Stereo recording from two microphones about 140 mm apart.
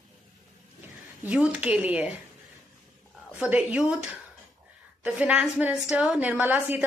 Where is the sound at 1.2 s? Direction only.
10° right (ahead or behind).